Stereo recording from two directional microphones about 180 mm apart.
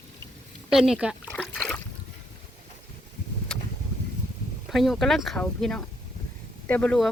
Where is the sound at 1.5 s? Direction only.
5° left (ahead or behind).